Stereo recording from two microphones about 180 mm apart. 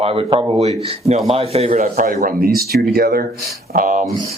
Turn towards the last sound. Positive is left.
turn(degrees=-45)  # may be behind; listen again after turning